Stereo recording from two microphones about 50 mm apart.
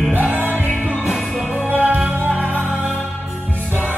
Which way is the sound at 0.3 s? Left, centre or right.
Right.